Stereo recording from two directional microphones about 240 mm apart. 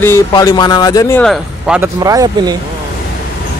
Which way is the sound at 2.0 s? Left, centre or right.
Centre.